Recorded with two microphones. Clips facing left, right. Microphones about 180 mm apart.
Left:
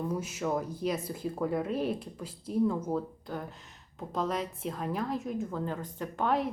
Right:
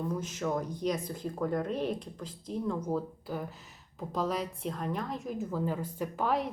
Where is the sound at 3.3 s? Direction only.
5° right (ahead or behind).